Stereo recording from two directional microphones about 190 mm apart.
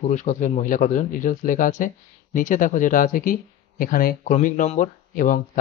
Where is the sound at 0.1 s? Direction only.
40° left (ahead or behind).